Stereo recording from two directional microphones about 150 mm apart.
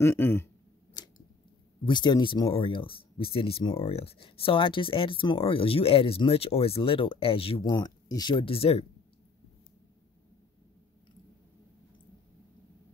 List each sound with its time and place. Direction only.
0.0 s speech: 15° left (ahead or behind)
1.0 s scissors: 30° left (ahead or behind)
1.9 s speech: 30° left (ahead or behind)